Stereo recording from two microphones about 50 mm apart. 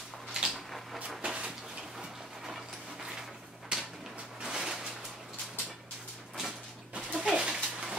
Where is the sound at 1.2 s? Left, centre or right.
Centre.